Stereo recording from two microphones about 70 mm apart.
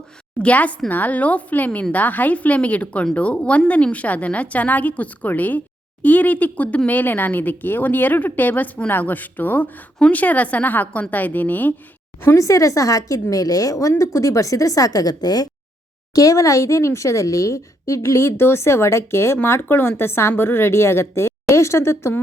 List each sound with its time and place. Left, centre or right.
0.3 s a woman's voice: centre
12.4 s a woman's voice: left
16.1 s a woman's voice: left